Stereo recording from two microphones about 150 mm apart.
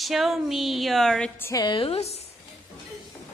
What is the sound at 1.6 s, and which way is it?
Speech, 35° left (ahead or behind).